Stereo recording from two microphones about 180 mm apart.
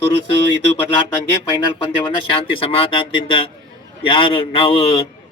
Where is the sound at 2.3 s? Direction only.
30° left (ahead or behind).